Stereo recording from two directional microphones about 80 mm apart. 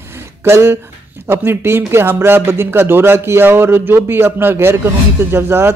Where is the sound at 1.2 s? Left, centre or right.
Right.